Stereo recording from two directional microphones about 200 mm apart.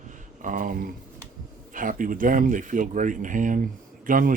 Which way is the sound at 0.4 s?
40° right (ahead or behind).